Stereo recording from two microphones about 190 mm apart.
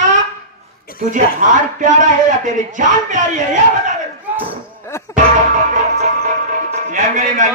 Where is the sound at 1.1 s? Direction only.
40° right (ahead or behind).